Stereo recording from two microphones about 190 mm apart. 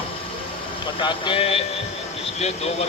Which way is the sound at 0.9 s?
25° left (ahead or behind).